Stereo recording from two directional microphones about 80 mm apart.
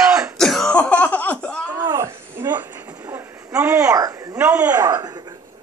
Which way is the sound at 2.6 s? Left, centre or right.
Right.